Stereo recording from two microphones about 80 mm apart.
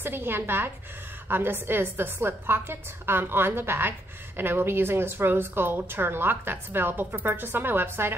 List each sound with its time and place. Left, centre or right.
0.0 s a woman's voice: right